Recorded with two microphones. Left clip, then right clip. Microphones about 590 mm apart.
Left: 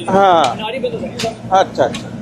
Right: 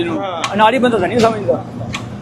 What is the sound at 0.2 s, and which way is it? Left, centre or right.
Speech, left.